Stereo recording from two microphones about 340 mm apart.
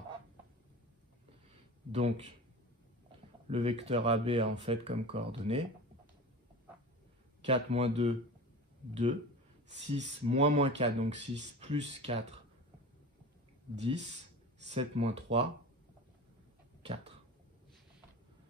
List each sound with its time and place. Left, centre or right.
1.9 s speech: centre
3.4 s speech: centre
7.4 s speech: centre
9.8 s speech: centre
13.7 s speech: centre
16.8 s cough: centre